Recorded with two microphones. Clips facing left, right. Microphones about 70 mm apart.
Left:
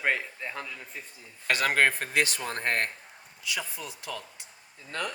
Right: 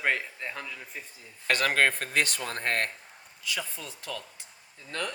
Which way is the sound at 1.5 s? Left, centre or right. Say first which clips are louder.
Even; centre.